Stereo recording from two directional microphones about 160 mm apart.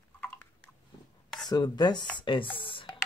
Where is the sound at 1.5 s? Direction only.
25° left (ahead or behind).